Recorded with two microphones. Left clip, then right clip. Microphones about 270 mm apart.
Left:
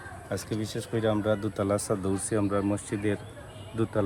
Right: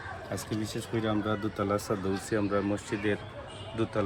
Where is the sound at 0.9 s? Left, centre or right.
Left.